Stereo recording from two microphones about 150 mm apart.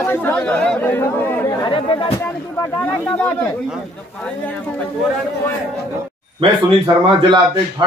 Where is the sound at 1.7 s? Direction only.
35° left (ahead or behind).